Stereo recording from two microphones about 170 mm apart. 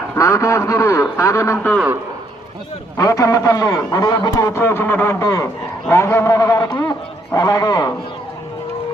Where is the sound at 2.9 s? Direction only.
20° left (ahead or behind).